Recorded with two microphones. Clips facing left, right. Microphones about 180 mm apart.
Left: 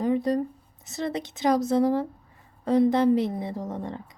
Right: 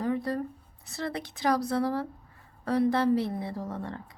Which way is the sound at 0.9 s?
20° left (ahead or behind).